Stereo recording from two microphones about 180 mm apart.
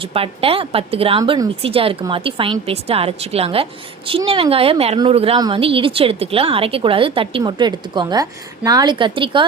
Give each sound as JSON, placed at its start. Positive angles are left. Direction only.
{"t": 0.0, "sound": "a woman's voice", "side_deg": -30}
{"t": 1.2, "sound": "a woman's voice", "side_deg": -20}
{"t": 1.6, "sound": "a woman's voice", "side_deg": -30}